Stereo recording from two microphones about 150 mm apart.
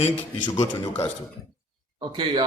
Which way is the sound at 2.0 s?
30° right (ahead or behind).